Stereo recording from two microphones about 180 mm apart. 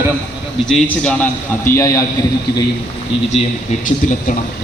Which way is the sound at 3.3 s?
40° left (ahead or behind).